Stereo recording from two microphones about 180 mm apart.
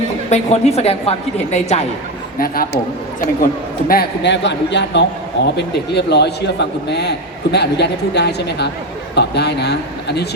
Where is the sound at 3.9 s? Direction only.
65° left (ahead or behind).